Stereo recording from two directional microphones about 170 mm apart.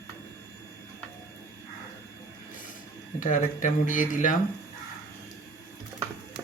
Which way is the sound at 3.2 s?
50° left (ahead or behind).